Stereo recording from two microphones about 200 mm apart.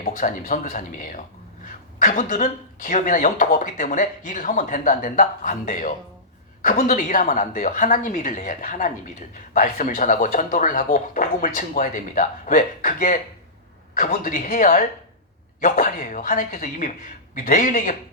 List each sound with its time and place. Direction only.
0.0 s speech: 40° left (ahead or behind)